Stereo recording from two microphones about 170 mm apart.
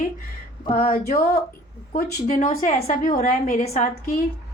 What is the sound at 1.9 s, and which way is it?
A woman's voice, 50° left (ahead or behind).